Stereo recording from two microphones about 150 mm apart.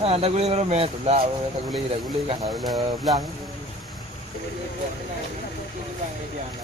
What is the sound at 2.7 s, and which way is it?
Speech, 25° right (ahead or behind).